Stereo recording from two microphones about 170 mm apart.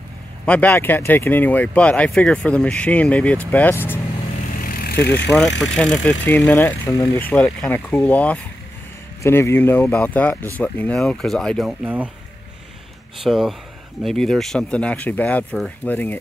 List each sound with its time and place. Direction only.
0.5 s speech: 10° left (ahead or behind)
4.6 s vehicle: 55° left (ahead or behind)
5.0 s speech: 90° left
5.8 s speech: 5° left (ahead or behind)
13.2 s speech: centre (ahead or behind)